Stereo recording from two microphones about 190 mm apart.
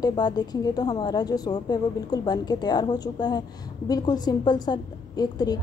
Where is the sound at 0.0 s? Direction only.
20° left (ahead or behind).